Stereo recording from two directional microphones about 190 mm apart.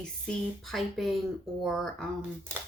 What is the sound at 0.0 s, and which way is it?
Speech, 5° left (ahead or behind).